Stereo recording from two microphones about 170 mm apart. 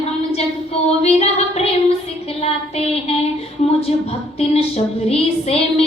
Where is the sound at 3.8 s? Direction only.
35° left (ahead or behind).